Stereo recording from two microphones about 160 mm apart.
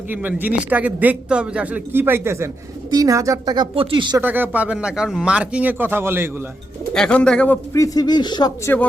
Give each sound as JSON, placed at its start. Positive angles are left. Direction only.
{"t": 0.1, "sound": "a man's voice", "side_deg": -10}
{"t": 4.2, "sound": "a man's voice", "side_deg": -10}
{"t": 6.9, "sound": "speech", "side_deg": 5}
{"t": 7.7, "sound": "speech", "side_deg": 20}